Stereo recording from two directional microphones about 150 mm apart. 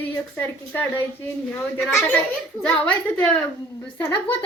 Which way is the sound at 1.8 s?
Centre (ahead or behind).